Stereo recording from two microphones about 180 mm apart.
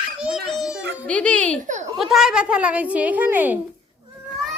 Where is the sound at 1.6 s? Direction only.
40° right (ahead or behind).